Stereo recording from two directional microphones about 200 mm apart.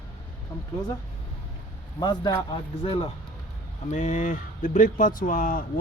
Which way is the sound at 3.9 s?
40° left (ahead or behind).